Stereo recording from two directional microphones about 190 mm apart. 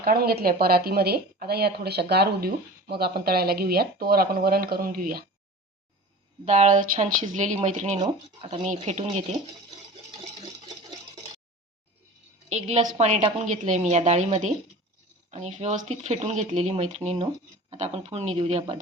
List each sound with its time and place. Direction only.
0.0 s a woman's voice: 50° right (ahead or behind)
6.4 s speech: 40° right (ahead or behind)
12.5 s speech: 35° right (ahead or behind)